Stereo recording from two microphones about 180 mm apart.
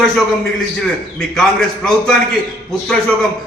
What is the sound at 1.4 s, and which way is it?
A man's voice, centre (ahead or behind).